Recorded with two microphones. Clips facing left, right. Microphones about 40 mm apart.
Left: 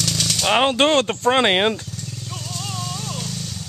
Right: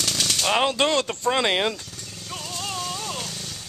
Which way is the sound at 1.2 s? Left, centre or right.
Left.